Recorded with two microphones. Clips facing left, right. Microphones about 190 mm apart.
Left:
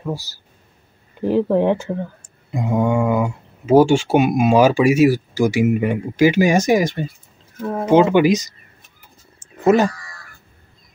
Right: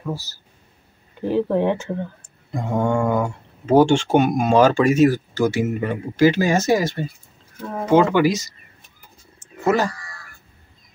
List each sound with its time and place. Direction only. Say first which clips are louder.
0.0 s speech: left 2 dB; 15° left (ahead or behind)
9.6 s speech: left 5 dB; 20° left (ahead or behind)